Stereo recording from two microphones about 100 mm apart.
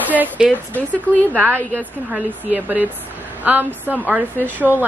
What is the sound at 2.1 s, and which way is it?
A woman's voice, 15° right (ahead or behind).